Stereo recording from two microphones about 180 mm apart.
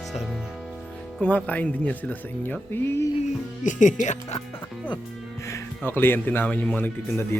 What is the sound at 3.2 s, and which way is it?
Speech, 45° left (ahead or behind).